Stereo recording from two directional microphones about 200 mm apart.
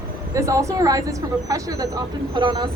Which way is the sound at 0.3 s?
15° right (ahead or behind).